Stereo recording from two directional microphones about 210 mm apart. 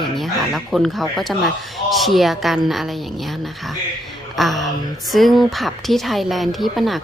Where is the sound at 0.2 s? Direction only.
Centre (ahead or behind).